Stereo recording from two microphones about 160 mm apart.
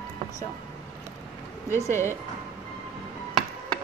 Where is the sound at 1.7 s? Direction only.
15° left (ahead or behind).